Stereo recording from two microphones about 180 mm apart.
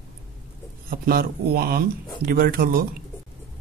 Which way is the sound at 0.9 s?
55° right (ahead or behind).